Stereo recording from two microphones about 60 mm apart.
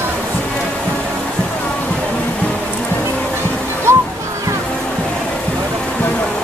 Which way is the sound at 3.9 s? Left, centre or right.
Right.